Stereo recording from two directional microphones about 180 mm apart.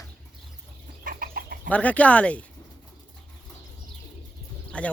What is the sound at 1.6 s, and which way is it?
Speech, 10° left (ahead or behind).